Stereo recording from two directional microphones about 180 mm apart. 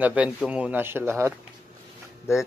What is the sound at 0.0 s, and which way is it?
Speech, 5° right (ahead or behind).